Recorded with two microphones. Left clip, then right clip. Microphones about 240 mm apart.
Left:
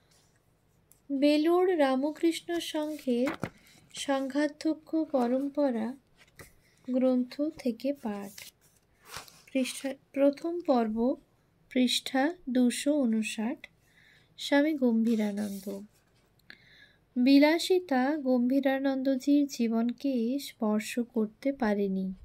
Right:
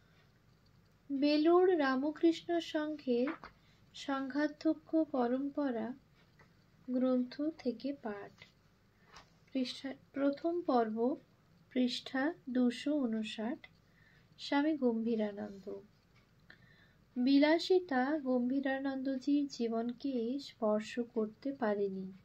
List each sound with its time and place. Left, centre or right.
1.2 s a woman's voice: left
6.9 s a woman's voice: left
9.5 s a woman's voice: left
17.2 s a woman's voice: left